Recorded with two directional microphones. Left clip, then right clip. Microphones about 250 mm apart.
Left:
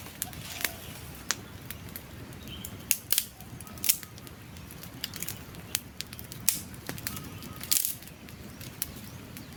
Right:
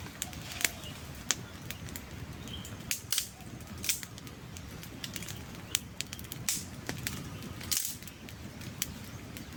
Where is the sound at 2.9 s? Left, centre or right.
Left.